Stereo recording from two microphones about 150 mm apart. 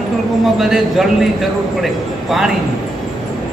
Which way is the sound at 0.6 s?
Centre (ahead or behind).